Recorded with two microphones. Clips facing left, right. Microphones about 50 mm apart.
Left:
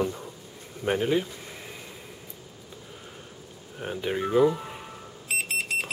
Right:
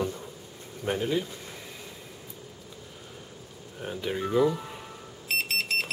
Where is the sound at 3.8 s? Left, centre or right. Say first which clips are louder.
Left 2 dB; centre.